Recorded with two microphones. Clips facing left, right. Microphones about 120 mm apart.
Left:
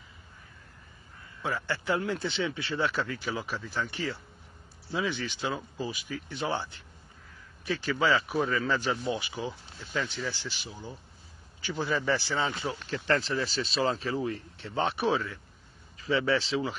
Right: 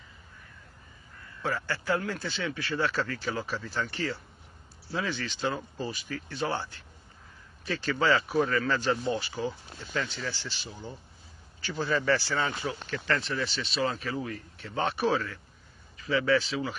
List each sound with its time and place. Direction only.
1.4 s speech: 15° left (ahead or behind)
12.9 s speech: 30° left (ahead or behind); by 15.3 s 15° left (ahead or behind)
16.0 s speech: 30° left (ahead or behind)